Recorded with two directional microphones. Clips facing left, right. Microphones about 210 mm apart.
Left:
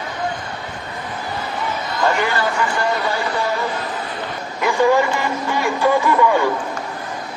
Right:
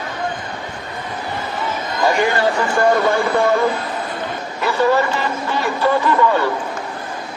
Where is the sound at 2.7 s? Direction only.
50° right (ahead or behind).